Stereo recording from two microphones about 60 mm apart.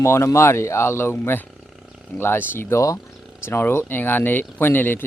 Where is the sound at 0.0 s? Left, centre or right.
Left.